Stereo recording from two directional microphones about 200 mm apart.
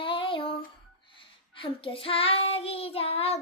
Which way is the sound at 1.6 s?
25° left (ahead or behind).